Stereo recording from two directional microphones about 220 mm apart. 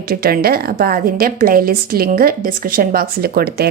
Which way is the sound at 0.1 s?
45° right (ahead or behind).